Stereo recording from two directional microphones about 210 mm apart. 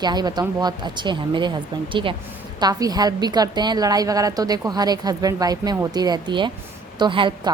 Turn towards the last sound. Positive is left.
turn(degrees=-25)  # may be behind; listen again after turning